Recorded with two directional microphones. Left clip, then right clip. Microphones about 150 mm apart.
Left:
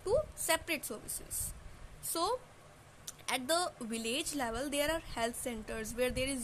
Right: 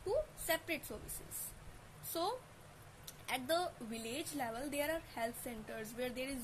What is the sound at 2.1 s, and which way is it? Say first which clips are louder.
A woman's voice: left 5 dB; 40° left (ahead or behind).